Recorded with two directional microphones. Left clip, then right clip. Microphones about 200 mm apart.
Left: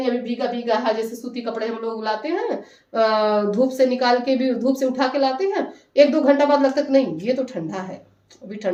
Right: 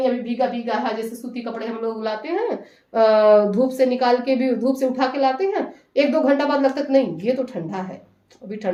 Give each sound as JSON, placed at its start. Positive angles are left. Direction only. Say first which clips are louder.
{"t": 0.0, "sound": "a woman's voice", "louder": "right 2 dB", "side_deg": -10}